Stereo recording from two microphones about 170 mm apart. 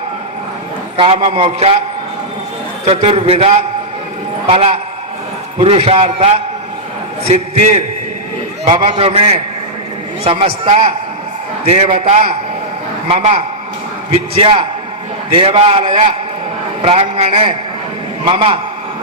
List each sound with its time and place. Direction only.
0.9 s a man's voice: 30° right (ahead or behind)
2.8 s a man's voice: 35° right (ahead or behind)
8.6 s a man's voice: 30° right (ahead or behind)